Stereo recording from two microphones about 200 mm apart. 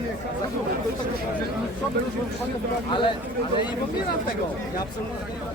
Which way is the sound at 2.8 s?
25° left (ahead or behind).